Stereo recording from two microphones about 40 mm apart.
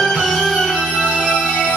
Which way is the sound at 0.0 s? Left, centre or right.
Centre.